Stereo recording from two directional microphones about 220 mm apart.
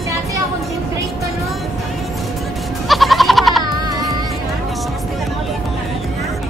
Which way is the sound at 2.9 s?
Centre (ahead or behind).